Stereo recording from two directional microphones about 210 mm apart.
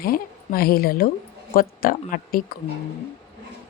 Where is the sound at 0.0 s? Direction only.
45° left (ahead or behind).